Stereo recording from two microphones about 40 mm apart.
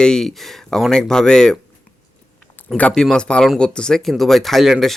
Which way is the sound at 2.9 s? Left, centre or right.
Centre.